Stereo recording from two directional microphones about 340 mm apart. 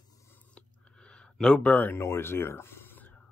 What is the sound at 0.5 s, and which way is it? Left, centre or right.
Speech, centre.